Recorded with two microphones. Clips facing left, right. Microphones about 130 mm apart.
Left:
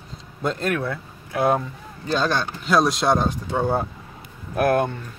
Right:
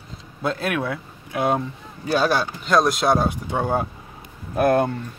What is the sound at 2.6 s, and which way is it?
Speech, centre (ahead or behind).